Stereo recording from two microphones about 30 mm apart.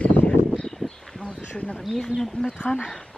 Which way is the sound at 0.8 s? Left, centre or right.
Left.